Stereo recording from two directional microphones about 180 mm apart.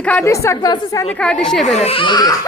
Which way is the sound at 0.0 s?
5° left (ahead or behind).